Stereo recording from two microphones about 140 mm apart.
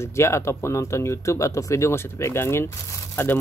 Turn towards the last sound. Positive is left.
turn(degrees=15)  # may be behind; listen again after turning